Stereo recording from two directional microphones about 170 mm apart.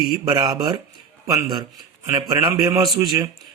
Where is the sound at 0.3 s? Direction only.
25° right (ahead or behind).